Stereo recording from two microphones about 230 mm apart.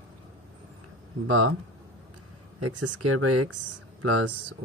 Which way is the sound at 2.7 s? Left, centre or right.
Right.